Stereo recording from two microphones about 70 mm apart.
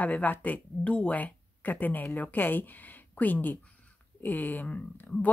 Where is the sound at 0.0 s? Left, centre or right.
Left.